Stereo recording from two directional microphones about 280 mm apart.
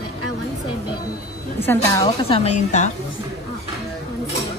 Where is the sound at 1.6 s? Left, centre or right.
Centre; by 2.9 s left.